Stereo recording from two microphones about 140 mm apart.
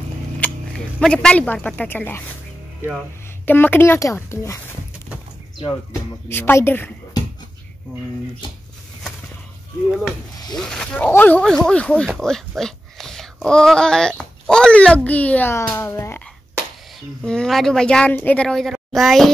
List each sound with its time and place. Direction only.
0.4 s speech: 5° left (ahead or behind)
3.4 s a child's voice: 15° left (ahead or behind)
6.2 s a child's voice: 15° left (ahead or behind)
10.6 s a child's voice: 5° left (ahead or behind)
17.2 s speech: 5° left (ahead or behind)